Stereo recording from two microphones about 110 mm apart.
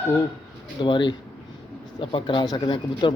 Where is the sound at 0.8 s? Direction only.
45° left (ahead or behind).